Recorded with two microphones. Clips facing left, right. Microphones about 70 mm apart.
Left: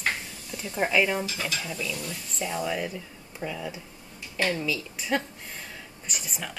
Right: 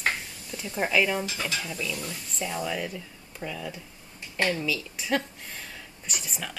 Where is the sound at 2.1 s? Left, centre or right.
Centre.